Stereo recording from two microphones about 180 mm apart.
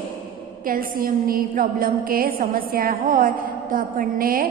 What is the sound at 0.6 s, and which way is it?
A woman's voice, 50° right (ahead or behind).